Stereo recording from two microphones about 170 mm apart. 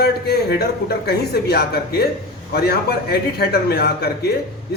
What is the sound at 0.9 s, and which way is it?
Speech, 70° left (ahead or behind).